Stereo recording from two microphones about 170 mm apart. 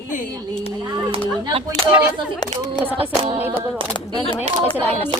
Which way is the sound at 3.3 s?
10° right (ahead or behind).